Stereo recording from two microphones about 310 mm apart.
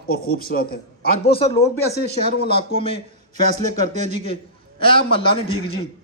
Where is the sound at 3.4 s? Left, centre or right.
Right.